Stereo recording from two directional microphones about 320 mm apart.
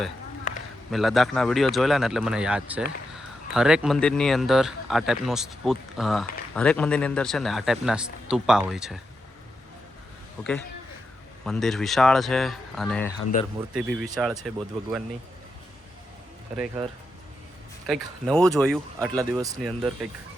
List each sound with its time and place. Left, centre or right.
0.9 s speech: centre
11.4 s speech: centre
13.3 s speech: left
13.7 s speech: centre
17.8 s speech: centre
19.1 s speech: centre